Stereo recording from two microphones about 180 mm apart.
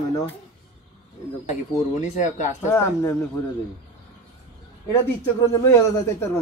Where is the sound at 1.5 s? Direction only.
40° left (ahead or behind).